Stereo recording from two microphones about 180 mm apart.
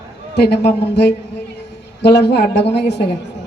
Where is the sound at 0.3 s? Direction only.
65° left (ahead or behind).